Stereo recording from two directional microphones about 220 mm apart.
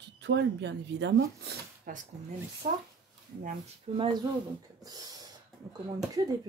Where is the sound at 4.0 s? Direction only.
20° right (ahead or behind).